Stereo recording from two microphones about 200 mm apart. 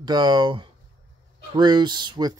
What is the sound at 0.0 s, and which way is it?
Speech, 20° right (ahead or behind).